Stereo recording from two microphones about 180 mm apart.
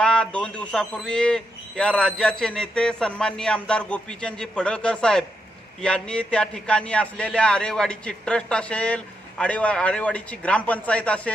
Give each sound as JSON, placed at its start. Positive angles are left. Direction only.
{"t": 0.0, "sound": "a man's voice", "side_deg": 5}